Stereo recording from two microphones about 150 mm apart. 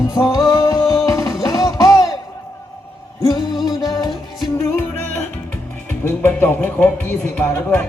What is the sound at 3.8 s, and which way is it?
Music, 25° left (ahead or behind).